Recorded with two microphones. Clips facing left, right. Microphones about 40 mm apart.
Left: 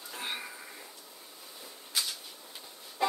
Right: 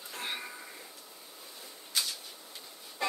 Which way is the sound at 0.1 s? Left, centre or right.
Centre.